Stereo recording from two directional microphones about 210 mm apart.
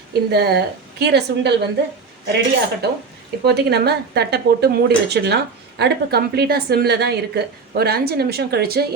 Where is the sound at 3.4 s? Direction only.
50° right (ahead or behind).